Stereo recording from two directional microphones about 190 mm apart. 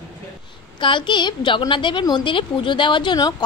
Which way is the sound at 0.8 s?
25° left (ahead or behind).